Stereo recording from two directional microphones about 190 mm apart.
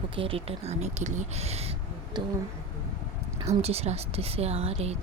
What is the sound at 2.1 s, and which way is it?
Speech, 25° right (ahead or behind).